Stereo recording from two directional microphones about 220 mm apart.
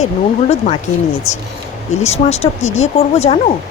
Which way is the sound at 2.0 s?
30° left (ahead or behind).